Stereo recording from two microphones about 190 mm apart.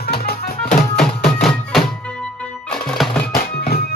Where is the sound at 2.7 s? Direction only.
Centre (ahead or behind).